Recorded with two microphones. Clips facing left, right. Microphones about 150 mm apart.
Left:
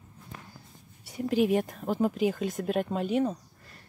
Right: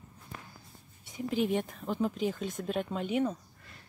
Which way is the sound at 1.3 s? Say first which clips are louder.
Left 5 dB; 5° left (ahead or behind).